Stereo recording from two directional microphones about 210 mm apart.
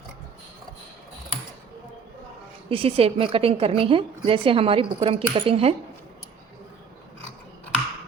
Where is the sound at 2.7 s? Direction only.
25° right (ahead or behind).